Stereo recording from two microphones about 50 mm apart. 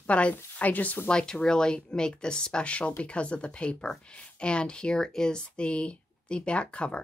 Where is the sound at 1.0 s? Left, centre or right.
Centre.